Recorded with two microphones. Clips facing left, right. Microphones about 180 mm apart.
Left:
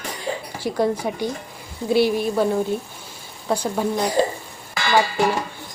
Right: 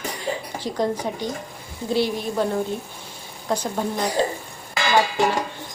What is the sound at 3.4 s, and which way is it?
Speech, 10° left (ahead or behind).